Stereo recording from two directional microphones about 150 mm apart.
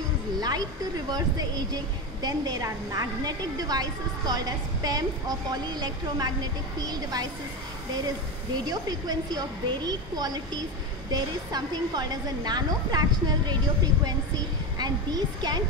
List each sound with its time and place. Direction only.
0.4 s a woman's voice: 25° right (ahead or behind)
2.2 s a woman's voice: 25° right (ahead or behind)
8.6 s a woman's voice: 25° right (ahead or behind)